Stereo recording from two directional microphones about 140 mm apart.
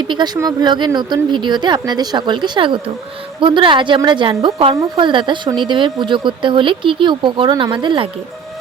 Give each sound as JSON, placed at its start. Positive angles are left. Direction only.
{"t": 0.3, "sound": "speech", "side_deg": -30}